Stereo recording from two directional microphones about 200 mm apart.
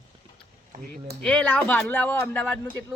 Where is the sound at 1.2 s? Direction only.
5° left (ahead or behind).